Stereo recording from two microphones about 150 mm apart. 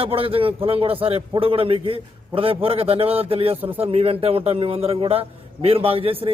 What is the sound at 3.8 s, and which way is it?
A man's voice, 40° right (ahead or behind).